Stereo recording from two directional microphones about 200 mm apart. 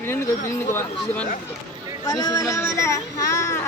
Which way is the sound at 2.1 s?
20° left (ahead or behind).